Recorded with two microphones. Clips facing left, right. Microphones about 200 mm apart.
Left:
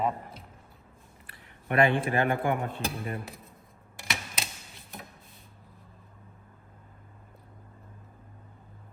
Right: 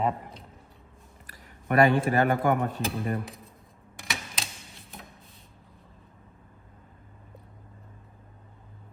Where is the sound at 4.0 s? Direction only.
Centre (ahead or behind).